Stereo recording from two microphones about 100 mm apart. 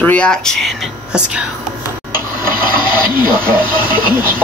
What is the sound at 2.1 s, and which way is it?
Speech, 20° right (ahead or behind).